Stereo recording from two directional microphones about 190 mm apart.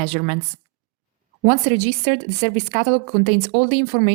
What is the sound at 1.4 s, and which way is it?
Speech, 40° right (ahead or behind).